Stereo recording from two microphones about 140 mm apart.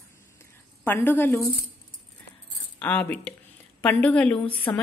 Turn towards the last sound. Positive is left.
turn(degrees=10)  # may be behind; listen again after turning